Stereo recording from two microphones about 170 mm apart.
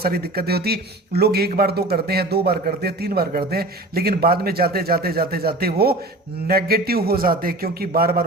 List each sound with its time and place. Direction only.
0.0 s speech: 65° right (ahead or behind)